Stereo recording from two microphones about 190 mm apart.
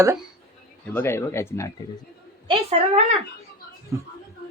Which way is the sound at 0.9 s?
10° left (ahead or behind).